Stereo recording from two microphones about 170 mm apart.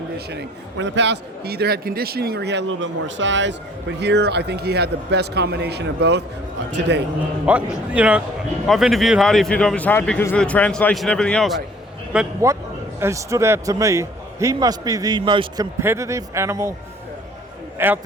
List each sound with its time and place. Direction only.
0.3 s a man's voice: 85° right
7.4 s a man's voice: 5° right (ahead or behind)
13.0 s a man's voice: 15° right (ahead or behind)
15.8 s speech: 15° right (ahead or behind)
17.7 s a man's voice: 10° right (ahead or behind)